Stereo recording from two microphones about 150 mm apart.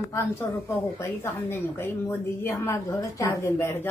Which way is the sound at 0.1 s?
15° left (ahead or behind).